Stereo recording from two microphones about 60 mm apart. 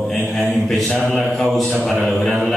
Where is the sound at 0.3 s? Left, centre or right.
Centre.